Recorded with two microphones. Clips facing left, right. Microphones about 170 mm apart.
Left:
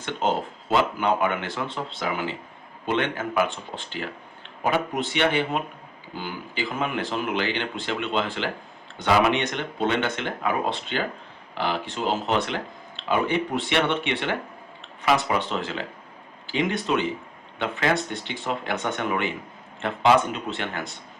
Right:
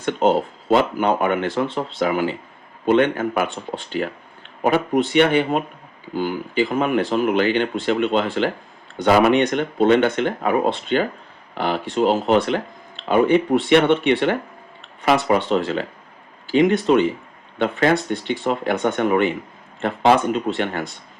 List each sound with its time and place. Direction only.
0.0 s speech: 50° right (ahead or behind)
4.6 s speech: 50° right (ahead or behind)